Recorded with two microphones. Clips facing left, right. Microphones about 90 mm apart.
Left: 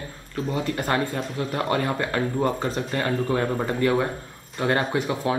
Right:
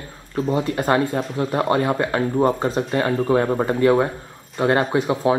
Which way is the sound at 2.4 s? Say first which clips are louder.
Right 5 dB; 35° right (ahead or behind).